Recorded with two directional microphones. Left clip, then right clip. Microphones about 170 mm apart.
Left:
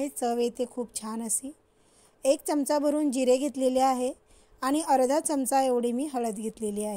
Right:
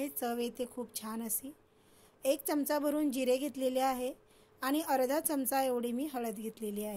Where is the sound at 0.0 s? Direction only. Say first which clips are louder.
Left 8 dB; 45° left (ahead or behind).